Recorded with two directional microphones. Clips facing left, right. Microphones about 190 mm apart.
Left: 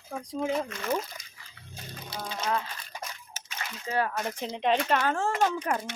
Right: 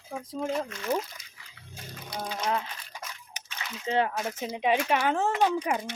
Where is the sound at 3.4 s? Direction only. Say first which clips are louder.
Even; 15° right (ahead or behind).